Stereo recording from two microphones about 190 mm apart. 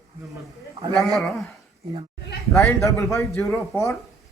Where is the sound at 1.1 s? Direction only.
Centre (ahead or behind).